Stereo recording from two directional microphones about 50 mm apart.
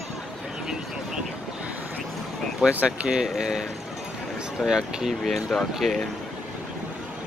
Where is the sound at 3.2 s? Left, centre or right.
Centre.